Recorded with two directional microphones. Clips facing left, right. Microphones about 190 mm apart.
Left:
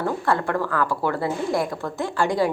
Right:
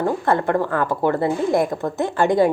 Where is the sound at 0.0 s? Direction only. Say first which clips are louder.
Right 4 dB; 20° right (ahead or behind).